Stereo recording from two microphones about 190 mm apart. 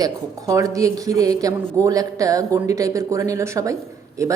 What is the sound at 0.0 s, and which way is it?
A woman's voice, 20° right (ahead or behind).